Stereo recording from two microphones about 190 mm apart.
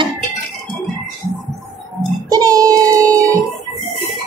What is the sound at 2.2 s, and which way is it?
Music, 20° right (ahead or behind).